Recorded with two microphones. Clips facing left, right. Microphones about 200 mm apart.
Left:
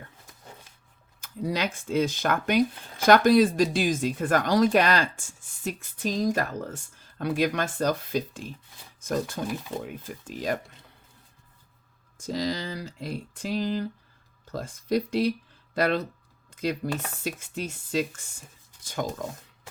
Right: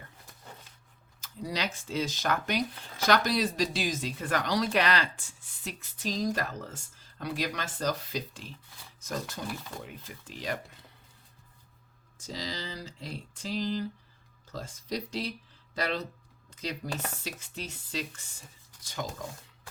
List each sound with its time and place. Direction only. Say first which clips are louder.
1.2 s speech: left 6 dB; 55° left (ahead or behind)
12.2 s speech: left 9 dB; 55° left (ahead or behind)